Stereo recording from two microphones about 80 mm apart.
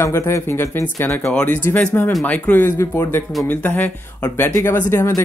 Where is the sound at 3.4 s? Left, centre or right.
Centre.